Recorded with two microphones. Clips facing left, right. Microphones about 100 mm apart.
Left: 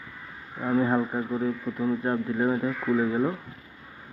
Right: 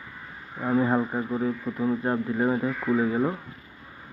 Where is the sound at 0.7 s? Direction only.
20° right (ahead or behind).